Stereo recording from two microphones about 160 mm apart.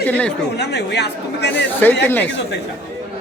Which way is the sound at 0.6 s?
90° left.